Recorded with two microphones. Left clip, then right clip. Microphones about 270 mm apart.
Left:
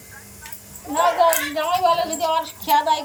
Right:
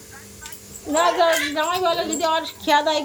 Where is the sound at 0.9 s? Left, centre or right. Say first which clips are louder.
Even; centre.